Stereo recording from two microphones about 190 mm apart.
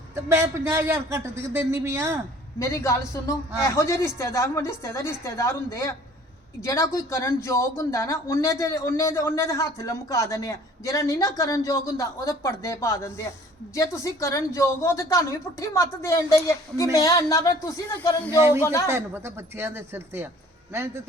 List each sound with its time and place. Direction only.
0.2 s a man's voice: 15° right (ahead or behind)
2.6 s speech: 15° left (ahead or behind)
18.3 s a man's voice: 10° right (ahead or behind)
18.6 s speech: 15° left (ahead or behind)
18.9 s a man's voice: 15° right (ahead or behind)